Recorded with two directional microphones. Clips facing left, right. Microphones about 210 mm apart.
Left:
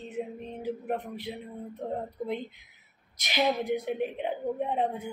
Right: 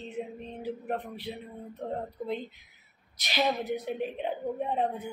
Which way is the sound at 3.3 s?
15° left (ahead or behind).